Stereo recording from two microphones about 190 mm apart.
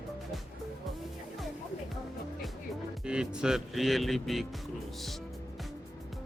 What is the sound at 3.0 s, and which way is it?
Speech, 5° right (ahead or behind).